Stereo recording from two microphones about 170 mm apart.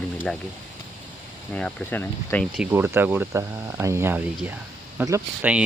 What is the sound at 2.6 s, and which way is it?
Speech, 15° right (ahead or behind).